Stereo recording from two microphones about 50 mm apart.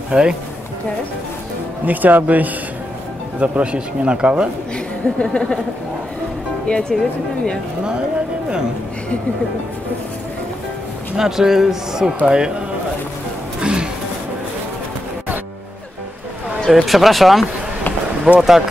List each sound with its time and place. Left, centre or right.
0.1 s speech: centre
1.9 s speech: right
4.7 s speech: centre
6.7 s speech: centre
11.1 s speech: centre
13.6 s music: centre
16.6 s speech: centre
18.3 s speech: right